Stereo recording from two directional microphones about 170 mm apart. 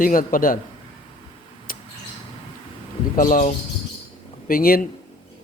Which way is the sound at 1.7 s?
55° left (ahead or behind).